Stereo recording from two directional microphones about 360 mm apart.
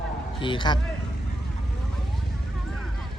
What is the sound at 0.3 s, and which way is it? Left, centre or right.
Speech, centre.